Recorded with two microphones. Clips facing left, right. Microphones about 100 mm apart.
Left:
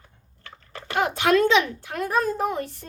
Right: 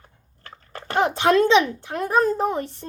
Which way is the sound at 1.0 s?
25° right (ahead or behind).